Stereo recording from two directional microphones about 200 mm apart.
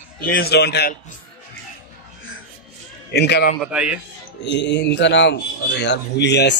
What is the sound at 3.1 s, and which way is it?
Speech, 55° left (ahead or behind).